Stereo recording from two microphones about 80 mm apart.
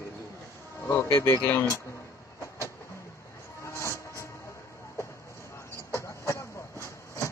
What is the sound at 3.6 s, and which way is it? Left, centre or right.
Train, left.